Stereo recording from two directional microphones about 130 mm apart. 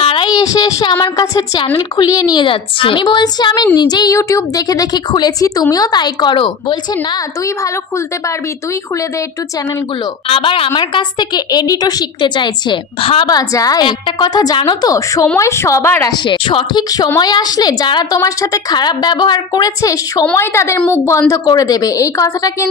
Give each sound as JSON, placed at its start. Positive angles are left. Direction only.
{"t": 0.0, "sound": "a sound", "side_deg": 45}
{"t": 0.3, "sound": "a woman's voice", "side_deg": 30}
{"t": 10.2, "sound": "a woman's voice", "side_deg": 45}
{"t": 13.3, "sound": "a woman's voice", "side_deg": 30}
{"t": 16.1, "sound": "a woman's voice", "side_deg": 40}